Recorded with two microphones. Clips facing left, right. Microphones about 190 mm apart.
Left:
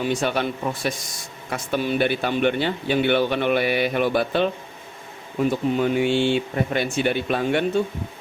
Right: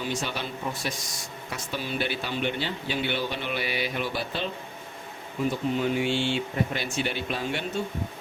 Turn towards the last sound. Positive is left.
turn(degrees=55)  # may be behind; listen again after turning